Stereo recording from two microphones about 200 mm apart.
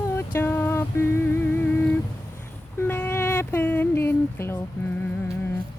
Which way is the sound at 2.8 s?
10° left (ahead or behind).